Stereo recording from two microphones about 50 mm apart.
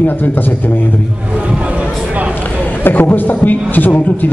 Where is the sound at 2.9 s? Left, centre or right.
Left.